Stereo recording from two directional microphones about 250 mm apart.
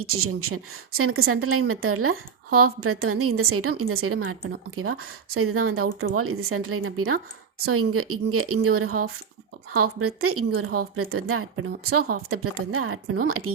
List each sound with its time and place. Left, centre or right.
0.0 s a woman's voice: right